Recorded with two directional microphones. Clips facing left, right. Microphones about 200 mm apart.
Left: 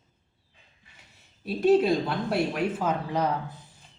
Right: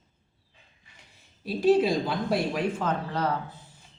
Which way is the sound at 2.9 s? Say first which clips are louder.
Left 1 dB; 15° left (ahead or behind).